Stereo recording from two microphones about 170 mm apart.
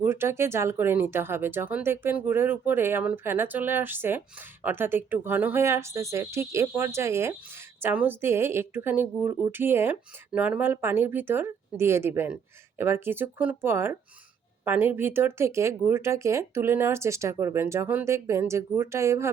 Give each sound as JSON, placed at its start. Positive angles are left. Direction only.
{"t": 0.0, "sound": "speech", "side_deg": -15}